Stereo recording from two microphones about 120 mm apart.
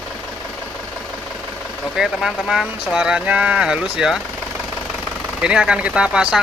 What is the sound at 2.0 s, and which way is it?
Speech, 5° right (ahead or behind).